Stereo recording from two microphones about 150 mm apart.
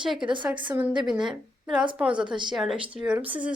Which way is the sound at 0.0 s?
5° right (ahead or behind).